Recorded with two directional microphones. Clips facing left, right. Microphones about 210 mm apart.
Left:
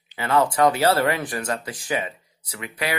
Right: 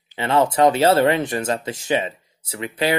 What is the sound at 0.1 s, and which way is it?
Speech, 25° right (ahead or behind).